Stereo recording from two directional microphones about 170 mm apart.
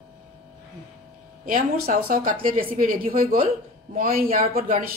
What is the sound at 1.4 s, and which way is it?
Speech, 50° right (ahead or behind).